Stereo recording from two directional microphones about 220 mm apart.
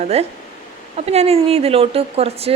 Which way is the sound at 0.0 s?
30° right (ahead or behind).